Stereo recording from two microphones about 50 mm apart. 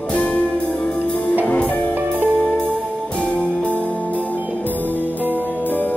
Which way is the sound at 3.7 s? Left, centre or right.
Right.